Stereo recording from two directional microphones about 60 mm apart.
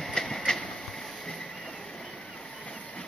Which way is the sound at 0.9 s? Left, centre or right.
Centre.